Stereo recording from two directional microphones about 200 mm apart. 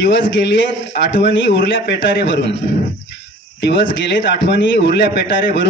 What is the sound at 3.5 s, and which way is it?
A man's voice, 60° left (ahead or behind).